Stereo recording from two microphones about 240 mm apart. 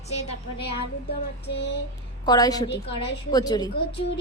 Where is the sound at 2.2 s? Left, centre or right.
Centre.